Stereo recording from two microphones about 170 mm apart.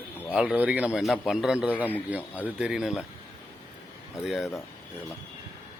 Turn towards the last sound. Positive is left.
turn(degrees=0)  # may be behind; listen again after turning